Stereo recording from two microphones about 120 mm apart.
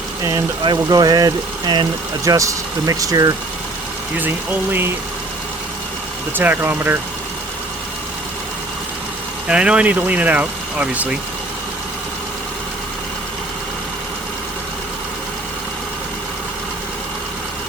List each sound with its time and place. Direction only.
0.2 s speech: 25° right (ahead or behind)
0.6 s speech: 35° right (ahead or behind)
2.2 s speech: 25° right (ahead or behind)
4.2 s speech: 15° right (ahead or behind)
6.3 s speech: 15° right (ahead or behind)
9.5 s speech: 10° right (ahead or behind)